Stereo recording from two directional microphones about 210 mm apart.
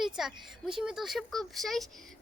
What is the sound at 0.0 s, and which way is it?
A woman's voice, centre (ahead or behind).